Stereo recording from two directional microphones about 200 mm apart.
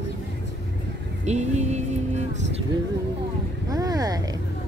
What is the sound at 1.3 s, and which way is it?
Vehicle, 35° right (ahead or behind).